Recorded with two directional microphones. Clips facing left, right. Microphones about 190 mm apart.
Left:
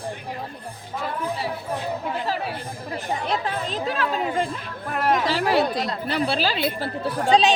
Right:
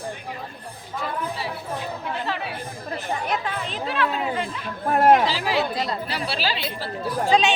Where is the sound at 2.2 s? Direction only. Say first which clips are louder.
Left 2 dB; 40° left (ahead or behind).